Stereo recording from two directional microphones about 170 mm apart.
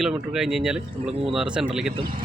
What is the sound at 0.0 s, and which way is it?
Speech, 5° right (ahead or behind).